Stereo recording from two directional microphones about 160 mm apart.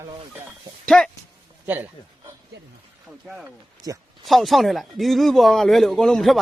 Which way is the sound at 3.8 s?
25° right (ahead or behind).